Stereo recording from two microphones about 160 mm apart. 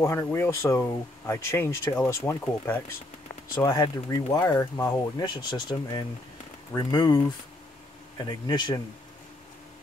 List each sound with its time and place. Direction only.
0.0 s speech: 15° left (ahead or behind)